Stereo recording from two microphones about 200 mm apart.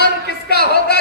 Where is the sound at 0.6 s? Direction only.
55° left (ahead or behind).